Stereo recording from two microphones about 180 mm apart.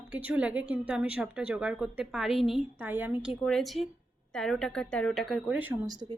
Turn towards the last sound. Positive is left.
turn(degrees=-20)  # may be behind; listen again after turning